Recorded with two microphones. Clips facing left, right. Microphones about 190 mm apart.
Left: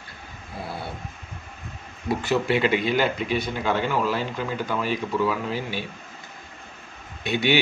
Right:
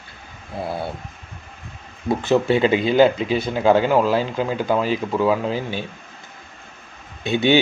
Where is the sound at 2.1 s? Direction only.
25° right (ahead or behind).